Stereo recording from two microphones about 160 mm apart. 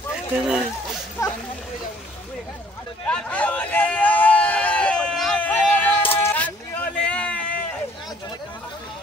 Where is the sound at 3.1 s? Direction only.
10° left (ahead or behind).